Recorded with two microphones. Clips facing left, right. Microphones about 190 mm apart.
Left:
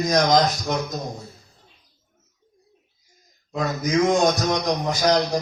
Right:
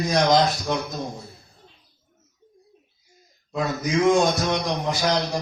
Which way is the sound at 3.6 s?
40° left (ahead or behind).